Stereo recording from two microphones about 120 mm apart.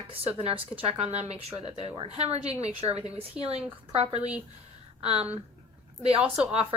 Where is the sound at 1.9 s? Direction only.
50° right (ahead or behind).